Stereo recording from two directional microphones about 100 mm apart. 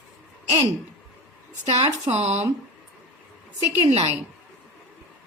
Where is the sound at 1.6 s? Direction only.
90° right.